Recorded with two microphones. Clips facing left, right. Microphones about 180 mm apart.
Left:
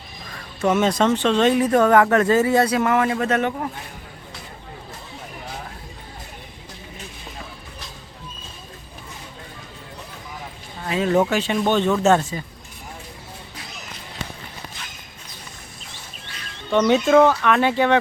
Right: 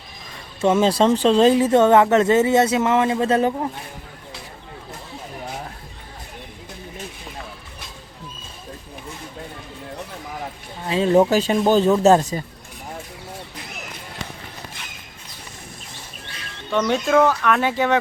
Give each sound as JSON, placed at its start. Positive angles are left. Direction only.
{"t": 0.6, "sound": "speech", "side_deg": -30}
{"t": 10.8, "sound": "speech", "side_deg": -25}
{"t": 11.3, "sound": "speech", "side_deg": -40}
{"t": 16.7, "sound": "speech", "side_deg": 0}